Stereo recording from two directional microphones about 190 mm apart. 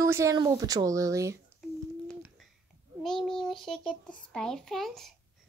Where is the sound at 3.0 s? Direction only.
5° left (ahead or behind).